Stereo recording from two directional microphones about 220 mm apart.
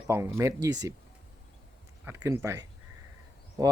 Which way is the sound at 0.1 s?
10° right (ahead or behind).